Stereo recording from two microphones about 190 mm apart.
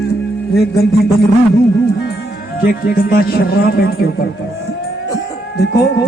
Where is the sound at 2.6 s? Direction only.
50° left (ahead or behind).